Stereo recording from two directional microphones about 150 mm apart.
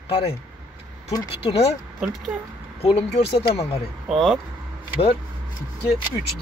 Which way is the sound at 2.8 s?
40° left (ahead or behind).